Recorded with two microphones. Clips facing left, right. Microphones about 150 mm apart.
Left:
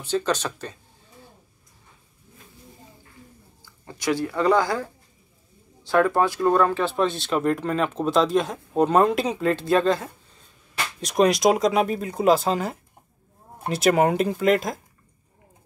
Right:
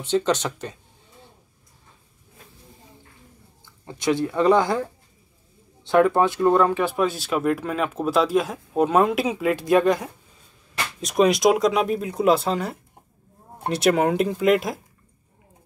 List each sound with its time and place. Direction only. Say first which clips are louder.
0.0 s speech: right 3 dB; 20° right (ahead or behind)
3.6 s speech: right 2 dB; 20° right (ahead or behind)
5.9 s speech: right 2 dB; 20° right (ahead or behind)
11.0 s speech: right 1 dB; centre (ahead or behind)